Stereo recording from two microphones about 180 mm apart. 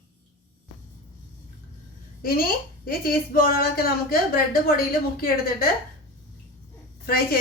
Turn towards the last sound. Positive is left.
turn(degrees=55)  # may be behind; listen again after turning